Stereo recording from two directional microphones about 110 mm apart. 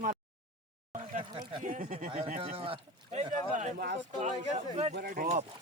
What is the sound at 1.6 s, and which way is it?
Speech, 70° right (ahead or behind).